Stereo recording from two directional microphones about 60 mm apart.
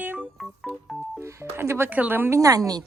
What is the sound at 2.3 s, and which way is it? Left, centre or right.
Speech, right.